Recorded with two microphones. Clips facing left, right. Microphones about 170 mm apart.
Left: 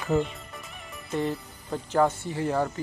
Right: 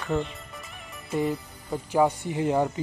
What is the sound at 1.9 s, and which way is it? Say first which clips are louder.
Speech: right 1 dB; 15° right (ahead or behind).